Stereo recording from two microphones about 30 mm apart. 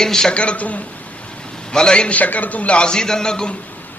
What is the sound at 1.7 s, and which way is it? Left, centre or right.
Speech, left.